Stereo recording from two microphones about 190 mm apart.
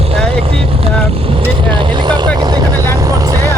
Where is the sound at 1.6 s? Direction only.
20° right (ahead or behind).